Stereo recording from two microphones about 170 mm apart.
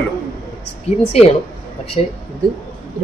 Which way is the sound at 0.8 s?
40° left (ahead or behind).